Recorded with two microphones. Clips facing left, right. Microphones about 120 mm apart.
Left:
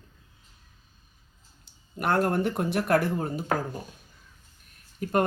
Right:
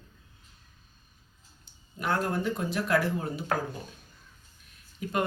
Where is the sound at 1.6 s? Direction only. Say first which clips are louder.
Left 4 dB; 60° left (ahead or behind).